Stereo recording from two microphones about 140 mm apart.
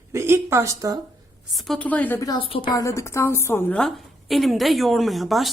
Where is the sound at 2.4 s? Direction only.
40° left (ahead or behind).